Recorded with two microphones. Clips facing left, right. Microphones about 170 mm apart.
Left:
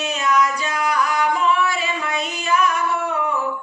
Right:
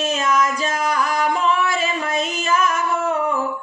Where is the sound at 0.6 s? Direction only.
45° right (ahead or behind).